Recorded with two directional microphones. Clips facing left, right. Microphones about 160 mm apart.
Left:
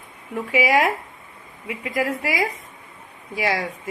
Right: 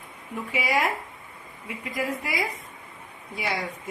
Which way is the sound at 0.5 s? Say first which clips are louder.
Left 7 dB; 90° left.